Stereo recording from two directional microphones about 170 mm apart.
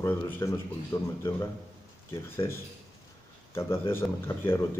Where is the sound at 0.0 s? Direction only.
15° left (ahead or behind).